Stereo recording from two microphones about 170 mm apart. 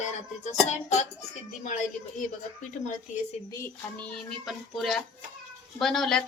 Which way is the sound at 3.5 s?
10° left (ahead or behind).